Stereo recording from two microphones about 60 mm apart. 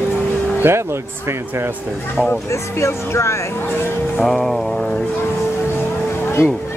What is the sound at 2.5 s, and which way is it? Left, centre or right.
Speech, left.